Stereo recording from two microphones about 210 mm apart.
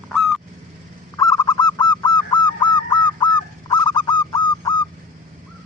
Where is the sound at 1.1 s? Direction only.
20° left (ahead or behind).